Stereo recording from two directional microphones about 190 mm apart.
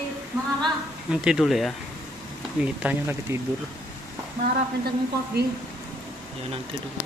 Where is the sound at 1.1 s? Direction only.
5° right (ahead or behind).